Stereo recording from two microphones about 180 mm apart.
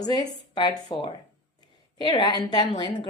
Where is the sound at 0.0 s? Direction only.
20° left (ahead or behind).